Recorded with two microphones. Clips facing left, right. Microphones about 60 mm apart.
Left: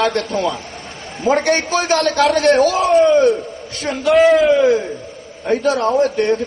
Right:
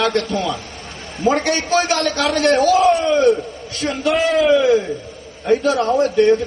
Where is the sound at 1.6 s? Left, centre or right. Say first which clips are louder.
Right 2 dB; right.